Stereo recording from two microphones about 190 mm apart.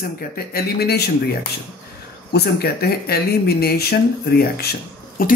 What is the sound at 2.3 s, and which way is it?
Speech, 55° left (ahead or behind).